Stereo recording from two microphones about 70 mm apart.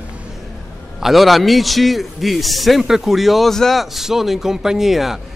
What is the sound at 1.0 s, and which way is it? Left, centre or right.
A man's voice, centre.